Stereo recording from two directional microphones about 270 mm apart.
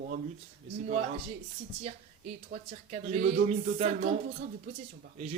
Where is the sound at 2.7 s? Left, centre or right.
Right.